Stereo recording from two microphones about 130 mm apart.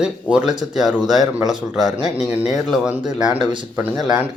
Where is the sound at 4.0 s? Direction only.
10° right (ahead or behind).